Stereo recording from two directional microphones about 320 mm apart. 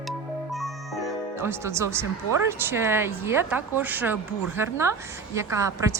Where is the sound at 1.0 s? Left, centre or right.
Centre.